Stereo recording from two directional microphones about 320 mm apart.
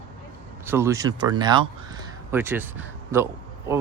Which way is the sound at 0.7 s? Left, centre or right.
Centre.